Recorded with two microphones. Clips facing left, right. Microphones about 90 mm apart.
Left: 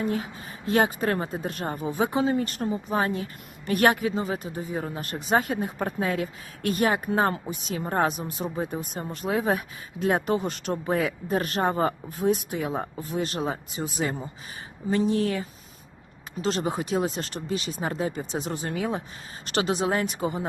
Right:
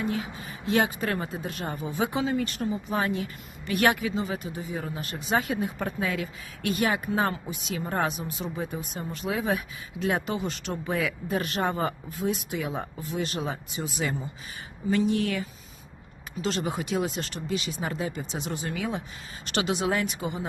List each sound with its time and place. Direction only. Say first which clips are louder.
0.0 s a woman's voice: left 2 dB; 45° left (ahead or behind)